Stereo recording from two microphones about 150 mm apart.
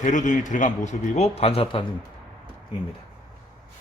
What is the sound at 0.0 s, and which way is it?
A man's voice, 55° left (ahead or behind).